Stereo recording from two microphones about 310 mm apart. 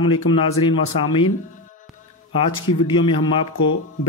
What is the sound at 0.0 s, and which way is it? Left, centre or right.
Speech, centre.